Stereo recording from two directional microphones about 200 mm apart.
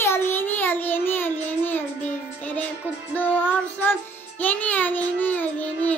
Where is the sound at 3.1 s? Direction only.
10° left (ahead or behind).